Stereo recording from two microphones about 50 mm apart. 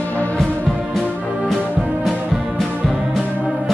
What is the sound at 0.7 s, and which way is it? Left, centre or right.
Music, centre.